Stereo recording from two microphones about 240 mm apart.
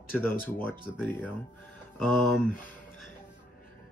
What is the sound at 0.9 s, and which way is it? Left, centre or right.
Speech, centre.